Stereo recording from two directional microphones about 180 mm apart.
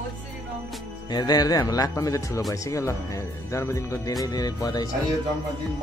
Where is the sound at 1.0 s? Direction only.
20° left (ahead or behind).